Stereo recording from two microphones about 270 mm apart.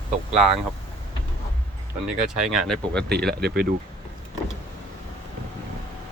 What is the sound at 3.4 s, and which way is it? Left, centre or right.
Speech, right.